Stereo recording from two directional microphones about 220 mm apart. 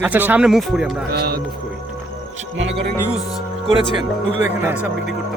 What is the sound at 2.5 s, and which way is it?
Speech, 55° right (ahead or behind).